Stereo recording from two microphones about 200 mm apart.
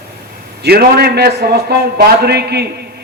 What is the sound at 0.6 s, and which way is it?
A man's voice, 55° right (ahead or behind).